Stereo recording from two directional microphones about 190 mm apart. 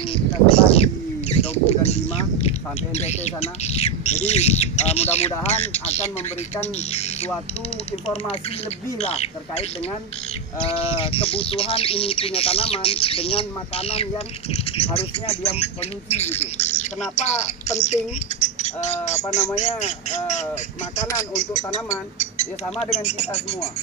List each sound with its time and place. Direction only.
0.1 s a sound: 30° left (ahead or behind)
2.4 s speech: 35° left (ahead or behind)
9.0 s speech: 35° left (ahead or behind)
21.0 s speech: 15° left (ahead or behind)
21.3 s speech: 35° left (ahead or behind)